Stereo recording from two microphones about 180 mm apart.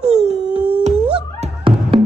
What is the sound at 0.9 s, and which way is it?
Music, 5° right (ahead or behind).